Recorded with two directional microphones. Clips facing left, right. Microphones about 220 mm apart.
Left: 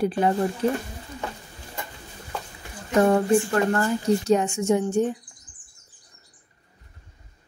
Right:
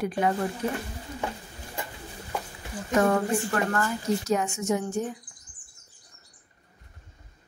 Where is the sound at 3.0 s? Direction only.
30° left (ahead or behind).